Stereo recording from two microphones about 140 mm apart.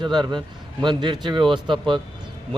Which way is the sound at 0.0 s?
35° right (ahead or behind).